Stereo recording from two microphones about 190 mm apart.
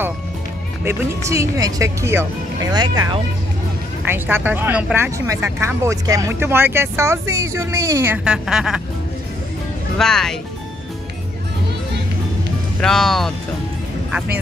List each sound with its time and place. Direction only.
0.8 s speech: 15° right (ahead or behind)
4.1 s speech: 10° right (ahead or behind)
9.9 s speech: 5° left (ahead or behind)
12.8 s speech: centre (ahead or behind)